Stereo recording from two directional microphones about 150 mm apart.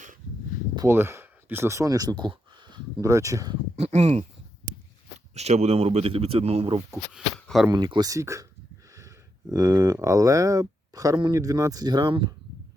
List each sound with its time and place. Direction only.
0.8 s speech: 15° right (ahead or behind)
3.8 s speech: 45° right (ahead or behind)
5.3 s speech: 45° right (ahead or behind)
6.9 s speech: centre (ahead or behind)
7.7 s speech: 30° right (ahead or behind)